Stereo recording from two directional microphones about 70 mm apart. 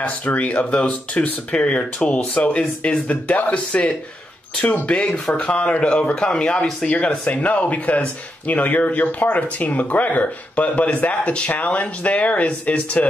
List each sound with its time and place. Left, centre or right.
0.0 s speech: left